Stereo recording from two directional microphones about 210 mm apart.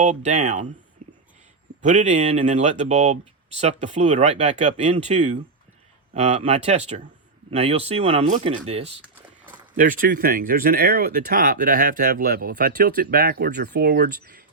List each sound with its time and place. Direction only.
0.0 s speech: 35° right (ahead or behind)
1.8 s speech: 35° right (ahead or behind)
9.7 s speech: 40° right (ahead or behind)